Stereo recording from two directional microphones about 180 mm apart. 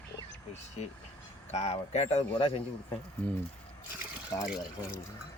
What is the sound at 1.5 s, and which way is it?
Speech, 40° left (ahead or behind).